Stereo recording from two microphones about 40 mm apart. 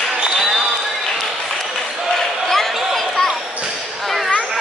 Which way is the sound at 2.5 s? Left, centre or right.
Centre.